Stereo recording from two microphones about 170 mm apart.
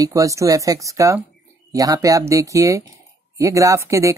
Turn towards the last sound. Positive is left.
turn(degrees=-15)  # may be behind; listen again after turning